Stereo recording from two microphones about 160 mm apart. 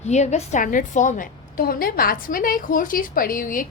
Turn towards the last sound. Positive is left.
turn(degrees=60)  # may be behind; listen again after turning